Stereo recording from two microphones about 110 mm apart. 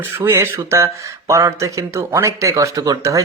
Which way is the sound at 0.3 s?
25° right (ahead or behind).